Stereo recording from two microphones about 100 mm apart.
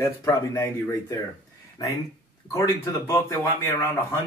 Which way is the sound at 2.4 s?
30° left (ahead or behind).